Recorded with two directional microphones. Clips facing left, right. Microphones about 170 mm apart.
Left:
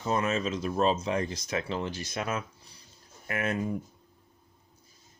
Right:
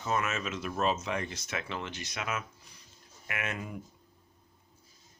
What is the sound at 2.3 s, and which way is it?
Speech, 35° left (ahead or behind).